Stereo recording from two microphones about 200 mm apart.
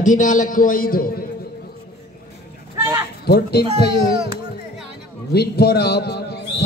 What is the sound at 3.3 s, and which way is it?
Speech, 55° left (ahead or behind).